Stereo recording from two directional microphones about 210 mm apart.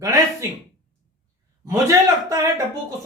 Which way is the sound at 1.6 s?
15° right (ahead or behind).